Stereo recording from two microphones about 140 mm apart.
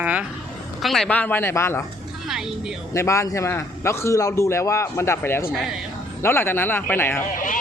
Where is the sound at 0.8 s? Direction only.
Centre (ahead or behind); by 1.8 s 20° left (ahead or behind).